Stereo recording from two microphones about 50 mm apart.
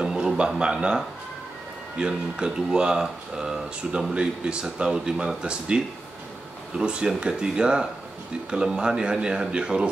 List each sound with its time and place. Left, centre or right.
0.0 s a sound: centre
0.6 s speech: centre
6.8 s speech: centre